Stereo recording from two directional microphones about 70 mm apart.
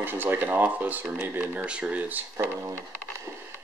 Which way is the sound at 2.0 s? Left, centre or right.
Right.